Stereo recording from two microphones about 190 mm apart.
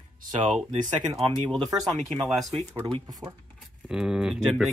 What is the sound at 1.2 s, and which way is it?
Speech, 25° right (ahead or behind).